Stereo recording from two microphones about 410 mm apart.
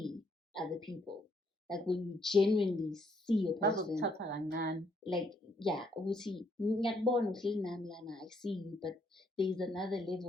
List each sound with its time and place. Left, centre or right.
0.0 s a sound: centre
1.6 s a woman's voice: centre
4.1 s a woman's voice: right
5.1 s a woman's voice: centre